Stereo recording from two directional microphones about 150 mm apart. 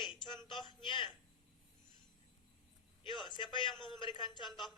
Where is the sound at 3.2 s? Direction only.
35° left (ahead or behind).